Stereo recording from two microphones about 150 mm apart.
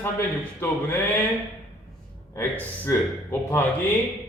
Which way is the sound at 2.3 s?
15° left (ahead or behind).